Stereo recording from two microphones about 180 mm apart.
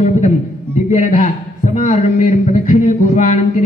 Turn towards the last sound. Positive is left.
turn(degrees=40)  # may be behind; listen again after turning